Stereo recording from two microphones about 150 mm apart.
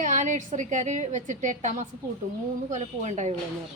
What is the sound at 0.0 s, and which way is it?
A woman's voice, 55° right (ahead or behind).